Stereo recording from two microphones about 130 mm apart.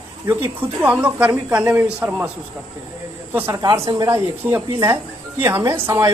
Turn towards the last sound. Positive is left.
turn(degrees=-25)  # may be behind; listen again after turning